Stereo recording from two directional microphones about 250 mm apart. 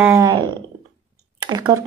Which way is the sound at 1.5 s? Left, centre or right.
Centre.